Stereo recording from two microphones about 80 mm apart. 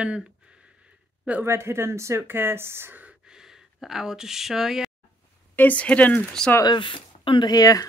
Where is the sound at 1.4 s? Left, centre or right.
Right.